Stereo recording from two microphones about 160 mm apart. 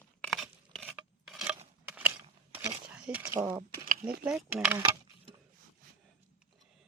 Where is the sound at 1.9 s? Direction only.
10° right (ahead or behind).